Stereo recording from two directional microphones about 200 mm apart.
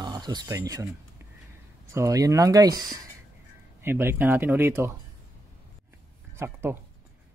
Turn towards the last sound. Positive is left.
turn(degrees=-10)  # may be behind; listen again after turning